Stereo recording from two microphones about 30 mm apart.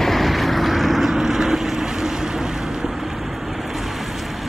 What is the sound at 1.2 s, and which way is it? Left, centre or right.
Vehicle, centre.